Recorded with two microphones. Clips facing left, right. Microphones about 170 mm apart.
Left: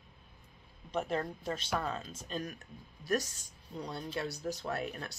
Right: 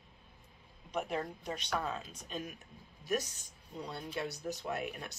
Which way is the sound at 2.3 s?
40° left (ahead or behind).